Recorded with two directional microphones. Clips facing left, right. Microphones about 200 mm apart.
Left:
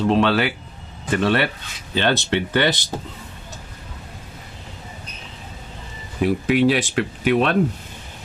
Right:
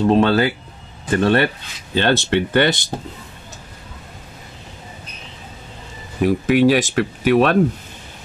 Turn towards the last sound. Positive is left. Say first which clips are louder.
# right 4 dB
turn(degrees=-45)  # may be behind; listen again after turning